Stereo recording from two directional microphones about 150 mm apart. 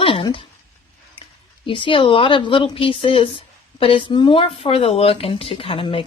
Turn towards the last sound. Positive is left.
turn(degrees=35)  # may be behind; listen again after turning